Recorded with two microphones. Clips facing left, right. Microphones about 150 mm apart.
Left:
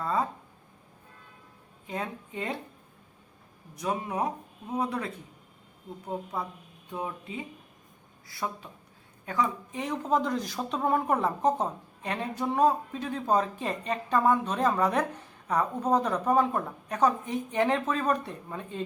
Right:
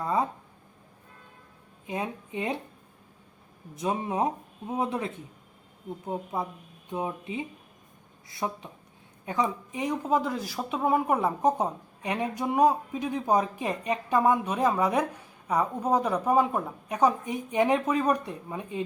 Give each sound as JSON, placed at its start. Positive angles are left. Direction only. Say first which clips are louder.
{"t": 0.0, "sound": "speech", "louder": "right 2 dB", "side_deg": -15}
{"t": 1.9, "sound": "speech", "louder": "right 2 dB", "side_deg": -20}
{"t": 3.8, "sound": "speech", "louder": "right 2 dB", "side_deg": -25}